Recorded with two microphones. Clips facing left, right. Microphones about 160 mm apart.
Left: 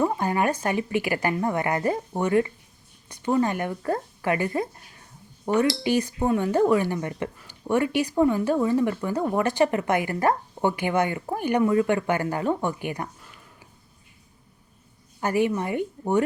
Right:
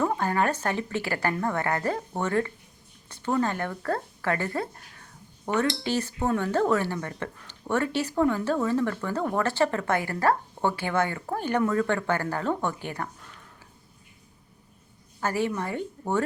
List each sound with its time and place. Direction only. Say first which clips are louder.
0.0 s speech: left 2 dB; 15° left (ahead or behind)
15.2 s speech: left 4 dB; 15° left (ahead or behind)